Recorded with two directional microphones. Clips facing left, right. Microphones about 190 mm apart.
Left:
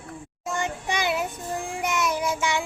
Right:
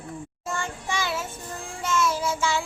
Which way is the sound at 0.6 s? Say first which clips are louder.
Left 3 dB; 20° left (ahead or behind).